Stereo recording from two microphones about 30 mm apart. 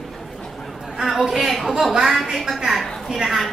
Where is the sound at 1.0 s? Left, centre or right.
Centre.